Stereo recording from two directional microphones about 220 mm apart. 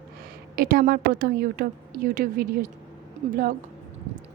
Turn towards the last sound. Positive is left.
turn(degrees=-40)  # may be behind; listen again after turning